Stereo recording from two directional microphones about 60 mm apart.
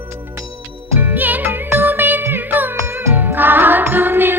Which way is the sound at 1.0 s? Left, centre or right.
Right.